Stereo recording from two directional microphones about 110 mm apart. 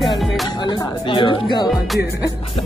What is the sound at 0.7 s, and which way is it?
Speech, 50° left (ahead or behind).